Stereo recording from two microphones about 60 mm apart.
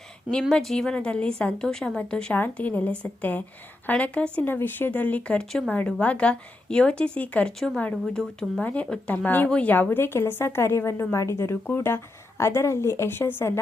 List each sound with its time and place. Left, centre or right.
0.5 s a woman's voice: centre
2.3 s a woman's voice: left
4.4 s a woman's voice: left
5.5 s a woman's voice: centre
5.7 s a woman's voice: left
8.6 s a woman's voice: left
11.6 s a woman's voice: left